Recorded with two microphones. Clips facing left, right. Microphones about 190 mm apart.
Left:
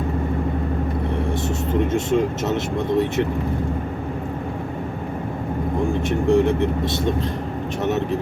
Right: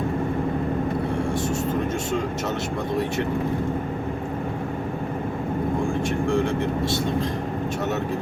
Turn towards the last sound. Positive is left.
turn(degrees=20)  # may be behind; listen again after turning